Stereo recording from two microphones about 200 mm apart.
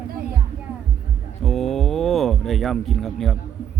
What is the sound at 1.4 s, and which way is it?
Speech, centre (ahead or behind).